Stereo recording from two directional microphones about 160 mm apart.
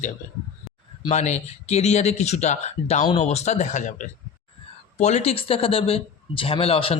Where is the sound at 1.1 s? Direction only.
45° left (ahead or behind).